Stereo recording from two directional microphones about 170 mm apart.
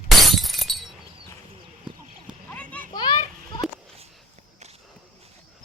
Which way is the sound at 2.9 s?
25° left (ahead or behind).